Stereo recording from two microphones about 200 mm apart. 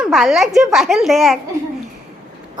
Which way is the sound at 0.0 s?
Centre (ahead or behind).